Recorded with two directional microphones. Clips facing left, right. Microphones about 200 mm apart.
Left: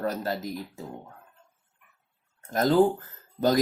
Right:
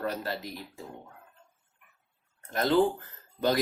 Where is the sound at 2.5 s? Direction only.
40° left (ahead or behind).